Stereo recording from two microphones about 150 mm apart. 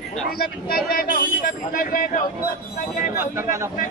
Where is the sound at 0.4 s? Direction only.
80° left; by 2.2 s 65° left (ahead or behind).